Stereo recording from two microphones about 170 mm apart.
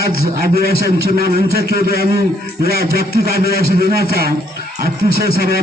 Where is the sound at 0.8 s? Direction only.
65° right (ahead or behind).